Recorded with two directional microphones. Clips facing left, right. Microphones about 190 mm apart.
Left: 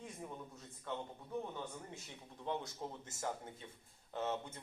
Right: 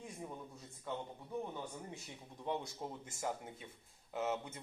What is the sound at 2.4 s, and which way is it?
A man's voice, 15° right (ahead or behind).